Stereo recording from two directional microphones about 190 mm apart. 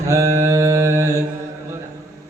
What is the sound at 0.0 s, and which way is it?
Mantra, 20° right (ahead or behind).